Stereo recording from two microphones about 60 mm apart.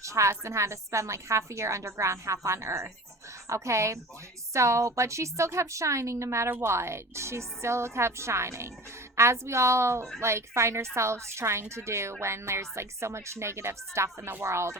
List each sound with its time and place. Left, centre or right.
0.0 s a woman's voice: right